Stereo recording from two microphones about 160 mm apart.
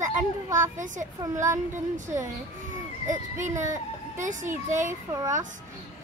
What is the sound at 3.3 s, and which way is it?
Speech, 50° right (ahead or behind).